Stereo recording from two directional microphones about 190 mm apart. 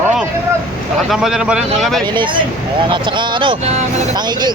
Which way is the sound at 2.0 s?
25° right (ahead or behind).